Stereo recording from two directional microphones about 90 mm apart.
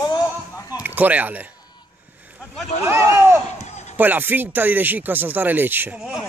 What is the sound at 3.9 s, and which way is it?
Speech, 20° right (ahead or behind).